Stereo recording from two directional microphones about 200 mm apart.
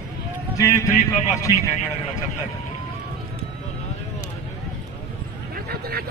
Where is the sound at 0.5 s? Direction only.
15° left (ahead or behind).